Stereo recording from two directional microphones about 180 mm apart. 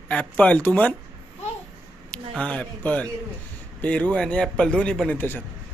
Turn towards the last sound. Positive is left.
turn(degrees=10)  # may be behind; listen again after turning